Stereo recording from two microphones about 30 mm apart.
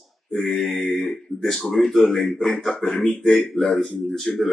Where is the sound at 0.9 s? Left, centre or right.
Centre.